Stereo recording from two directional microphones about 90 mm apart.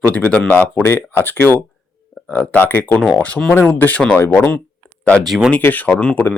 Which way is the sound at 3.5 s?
20° left (ahead or behind).